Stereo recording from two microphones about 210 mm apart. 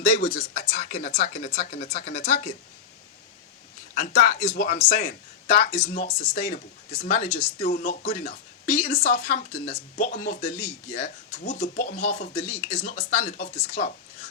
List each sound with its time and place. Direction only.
0.1 s speech: 40° left (ahead or behind)
3.9 s speech: 40° left (ahead or behind)